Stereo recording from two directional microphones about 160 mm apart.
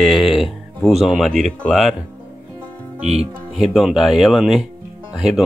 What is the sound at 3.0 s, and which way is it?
Speech, 40° right (ahead or behind).